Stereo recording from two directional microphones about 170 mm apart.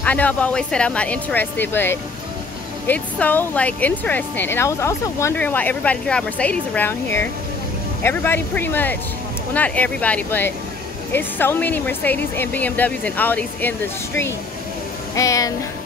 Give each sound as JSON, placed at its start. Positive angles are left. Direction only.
{"t": 0.0, "sound": "speech", "side_deg": 10}